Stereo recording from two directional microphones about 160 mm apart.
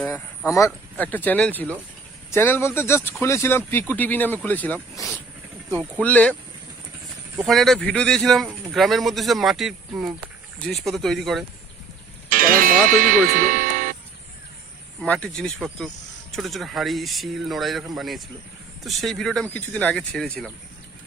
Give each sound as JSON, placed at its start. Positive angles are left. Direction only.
{"t": 0.5, "sound": "speech", "side_deg": 15}
{"t": 6.0, "sound": "speech", "side_deg": 10}
{"t": 7.4, "sound": "speech", "side_deg": 0}
{"t": 12.3, "sound": "music", "side_deg": -60}
{"t": 15.0, "sound": "speech", "side_deg": 5}